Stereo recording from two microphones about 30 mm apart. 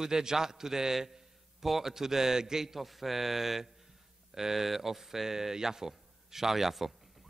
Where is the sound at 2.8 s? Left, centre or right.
Centre.